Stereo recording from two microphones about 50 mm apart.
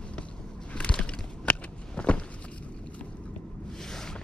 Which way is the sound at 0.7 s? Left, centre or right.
Left.